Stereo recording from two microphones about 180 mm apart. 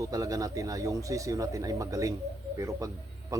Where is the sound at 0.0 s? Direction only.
20° right (ahead or behind).